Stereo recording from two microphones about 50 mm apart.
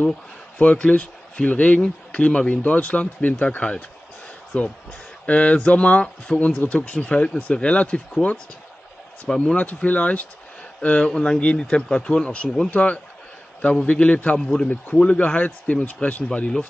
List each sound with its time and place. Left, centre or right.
0.6 s speech: left
9.3 s speech: centre
9.8 s speech: left
14.4 s speech: centre